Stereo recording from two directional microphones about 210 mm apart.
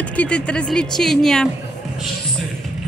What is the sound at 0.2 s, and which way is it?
Speech, 5° left (ahead or behind).